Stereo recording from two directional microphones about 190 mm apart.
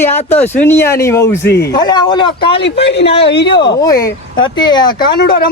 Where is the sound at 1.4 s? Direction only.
60° left (ahead or behind).